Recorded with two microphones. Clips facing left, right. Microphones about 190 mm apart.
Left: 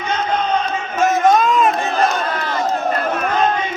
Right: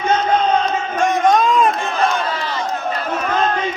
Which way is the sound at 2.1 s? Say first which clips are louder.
Left 1 dB; 50° left (ahead or behind).